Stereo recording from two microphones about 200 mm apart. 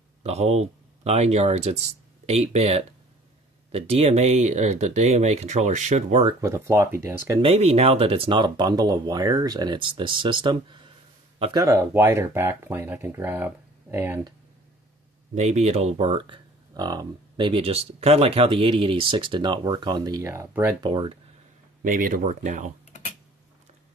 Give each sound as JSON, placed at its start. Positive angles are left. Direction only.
{"t": 0.2, "sound": "speech", "side_deg": -30}
{"t": 6.4, "sound": "speech", "side_deg": -15}
{"t": 7.4, "sound": "speech", "side_deg": -30}
{"t": 11.6, "sound": "speech", "side_deg": -10}
{"t": 15.3, "sound": "speech", "side_deg": -35}
{"t": 20.8, "sound": "speech", "side_deg": -25}
{"t": 21.8, "sound": "speech", "side_deg": -45}